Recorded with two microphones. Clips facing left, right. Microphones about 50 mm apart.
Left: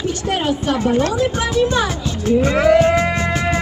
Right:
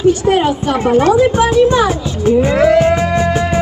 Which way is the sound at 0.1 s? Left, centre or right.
Centre.